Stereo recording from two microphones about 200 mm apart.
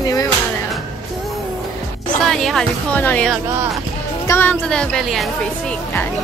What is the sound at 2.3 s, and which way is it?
Speech, centre (ahead or behind).